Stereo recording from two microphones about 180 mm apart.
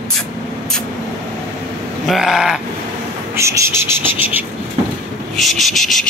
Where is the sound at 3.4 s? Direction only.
15° right (ahead or behind).